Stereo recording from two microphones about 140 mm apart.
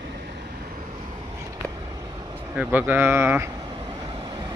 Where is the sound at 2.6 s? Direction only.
15° right (ahead or behind).